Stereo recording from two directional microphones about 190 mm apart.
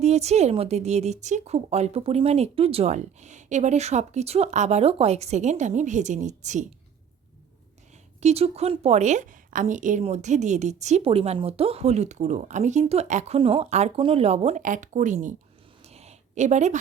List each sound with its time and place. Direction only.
0.0 s a woman's voice: 35° right (ahead or behind)
8.2 s a woman's voice: 35° right (ahead or behind)
15.8 s a sound: 35° right (ahead or behind)